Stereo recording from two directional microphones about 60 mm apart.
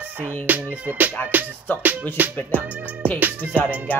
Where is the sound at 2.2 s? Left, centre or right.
Right.